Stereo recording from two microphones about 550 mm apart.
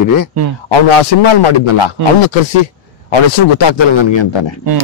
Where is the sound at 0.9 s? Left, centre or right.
Left.